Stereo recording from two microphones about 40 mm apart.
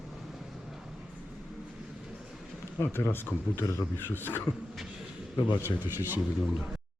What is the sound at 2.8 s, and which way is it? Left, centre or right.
Speech, left.